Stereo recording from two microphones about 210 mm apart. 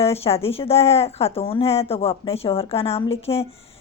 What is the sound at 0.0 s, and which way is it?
Speech, 30° left (ahead or behind).